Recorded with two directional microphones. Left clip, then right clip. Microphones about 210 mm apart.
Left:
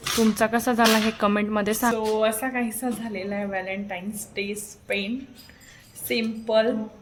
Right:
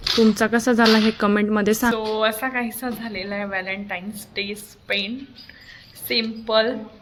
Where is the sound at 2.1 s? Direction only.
15° left (ahead or behind).